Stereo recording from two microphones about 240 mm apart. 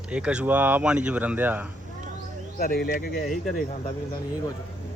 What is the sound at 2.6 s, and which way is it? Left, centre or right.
Speech, left.